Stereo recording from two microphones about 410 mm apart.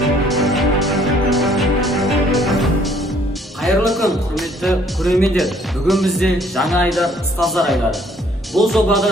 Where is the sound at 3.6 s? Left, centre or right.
Centre.